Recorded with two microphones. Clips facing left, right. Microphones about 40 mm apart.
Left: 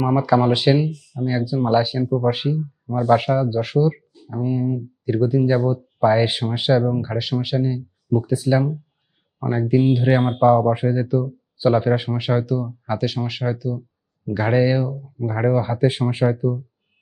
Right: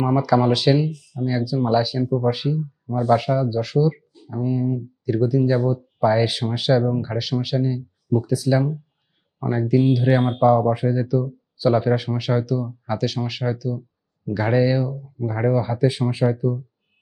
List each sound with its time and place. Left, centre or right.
0.2 s speech: left
2.0 s speech: centre
2.3 s speech: left
2.8 s speech: left
4.3 s speech: centre
8.3 s speech: left
12.8 s speech: centre; by 16.2 s left